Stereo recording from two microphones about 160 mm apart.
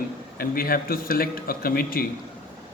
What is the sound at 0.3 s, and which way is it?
A man's voice, 65° left (ahead or behind).